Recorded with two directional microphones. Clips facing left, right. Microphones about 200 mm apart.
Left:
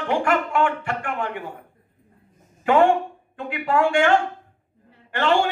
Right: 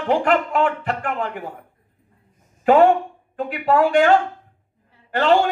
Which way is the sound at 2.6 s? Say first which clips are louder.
Right 3 dB; 35° right (ahead or behind).